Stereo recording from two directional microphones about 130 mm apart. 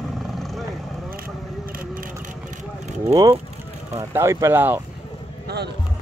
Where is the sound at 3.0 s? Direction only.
30° right (ahead or behind).